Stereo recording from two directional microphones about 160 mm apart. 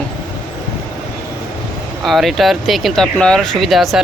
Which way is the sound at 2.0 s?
Centre (ahead or behind).